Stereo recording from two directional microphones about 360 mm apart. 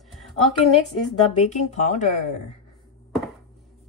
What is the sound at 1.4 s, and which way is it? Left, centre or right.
Speech, centre.